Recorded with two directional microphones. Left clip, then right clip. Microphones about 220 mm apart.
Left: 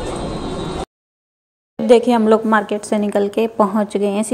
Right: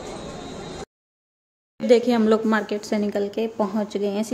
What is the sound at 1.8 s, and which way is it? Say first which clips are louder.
A woman's voice: left 6 dB; 10° left (ahead or behind).